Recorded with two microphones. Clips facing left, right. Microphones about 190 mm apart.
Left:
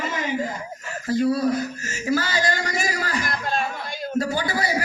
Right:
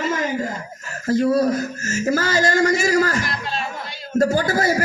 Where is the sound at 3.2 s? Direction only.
50° left (ahead or behind).